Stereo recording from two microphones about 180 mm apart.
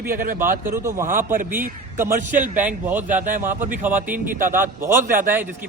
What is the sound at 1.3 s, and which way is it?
Speech, 50° right (ahead or behind).